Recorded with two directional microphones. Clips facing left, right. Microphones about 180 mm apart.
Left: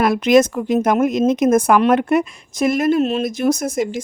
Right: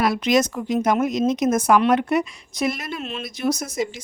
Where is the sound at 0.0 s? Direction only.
55° left (ahead or behind).